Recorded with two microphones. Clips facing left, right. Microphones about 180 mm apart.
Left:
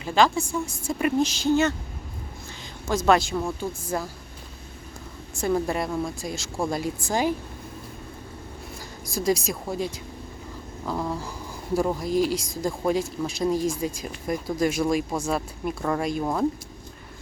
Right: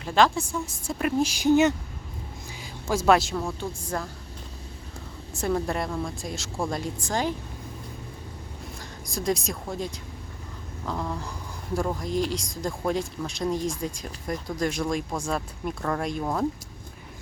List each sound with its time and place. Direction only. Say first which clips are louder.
0.0 s speech: left 1 dB; centre (ahead or behind)
1.3 s speech: right 2 dB; 15° right (ahead or behind)
2.9 s speech: even; 5° right (ahead or behind)
5.4 s speech: left 2 dB; centre (ahead or behind)
9.1 s speech: left 3 dB; centre (ahead or behind)